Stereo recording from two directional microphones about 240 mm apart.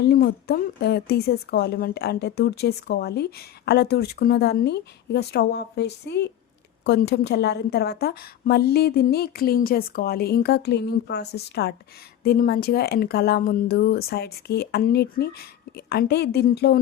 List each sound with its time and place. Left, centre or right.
0.0 s a woman's voice: left